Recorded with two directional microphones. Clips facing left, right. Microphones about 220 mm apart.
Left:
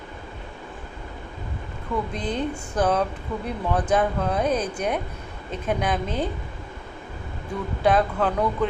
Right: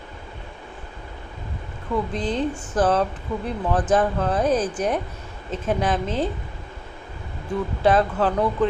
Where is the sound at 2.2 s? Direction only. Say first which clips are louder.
Right 3 dB; 30° right (ahead or behind).